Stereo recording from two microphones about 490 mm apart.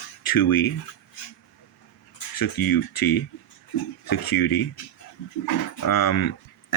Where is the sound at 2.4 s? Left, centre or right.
Left.